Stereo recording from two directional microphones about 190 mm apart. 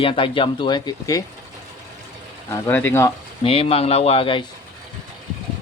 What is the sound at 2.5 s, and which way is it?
Speech, 10° left (ahead or behind).